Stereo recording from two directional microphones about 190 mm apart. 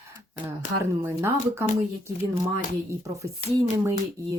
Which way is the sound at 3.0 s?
15° right (ahead or behind).